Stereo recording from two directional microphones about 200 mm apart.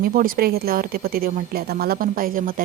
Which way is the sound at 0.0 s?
45° right (ahead or behind).